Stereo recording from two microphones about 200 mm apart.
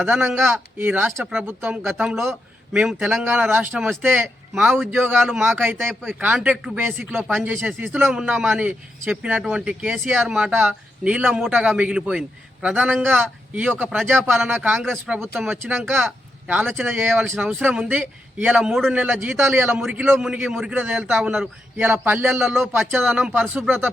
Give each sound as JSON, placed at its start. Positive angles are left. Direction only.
{"t": 0.0, "sound": "a man's voice", "side_deg": -5}
{"t": 5.1, "sound": "a man's voice", "side_deg": 0}
{"t": 16.0, "sound": "a sound", "side_deg": -5}
{"t": 16.7, "sound": "speech", "side_deg": -10}
{"t": 17.2, "sound": "a man's voice", "side_deg": 0}